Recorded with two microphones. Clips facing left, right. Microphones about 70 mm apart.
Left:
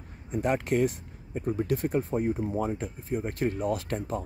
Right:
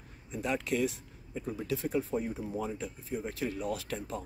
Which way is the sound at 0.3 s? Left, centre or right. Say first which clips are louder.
Left 6 dB; left.